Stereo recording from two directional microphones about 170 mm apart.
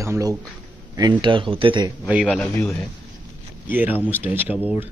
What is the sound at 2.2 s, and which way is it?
Speech, centre (ahead or behind).